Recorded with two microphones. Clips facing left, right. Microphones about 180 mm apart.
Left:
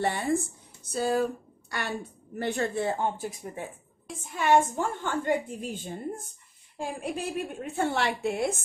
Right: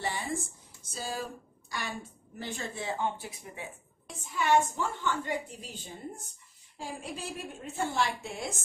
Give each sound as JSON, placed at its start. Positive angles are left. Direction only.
{"t": 0.0, "sound": "a woman's voice", "side_deg": 60}